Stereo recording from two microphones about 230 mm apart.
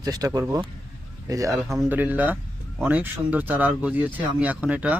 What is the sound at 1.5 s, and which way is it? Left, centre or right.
Speech, centre.